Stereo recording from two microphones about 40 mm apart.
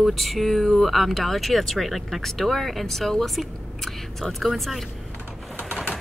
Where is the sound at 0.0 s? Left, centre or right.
Centre.